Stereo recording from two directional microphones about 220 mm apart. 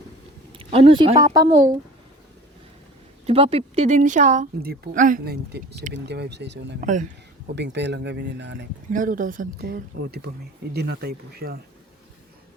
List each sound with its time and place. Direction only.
0.5 s speech: 25° right (ahead or behind)
3.2 s speech: 25° right (ahead or behind); by 6.7 s 50° right (ahead or behind)
6.8 s speech: 35° right (ahead or behind)
7.5 s speech: 50° right (ahead or behind)
8.9 s speech: 35° right (ahead or behind)